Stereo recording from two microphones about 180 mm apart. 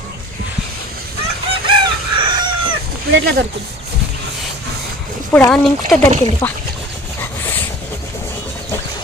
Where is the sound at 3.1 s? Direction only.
65° right (ahead or behind).